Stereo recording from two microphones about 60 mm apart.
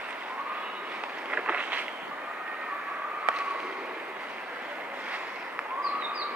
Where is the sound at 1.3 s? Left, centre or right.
Right.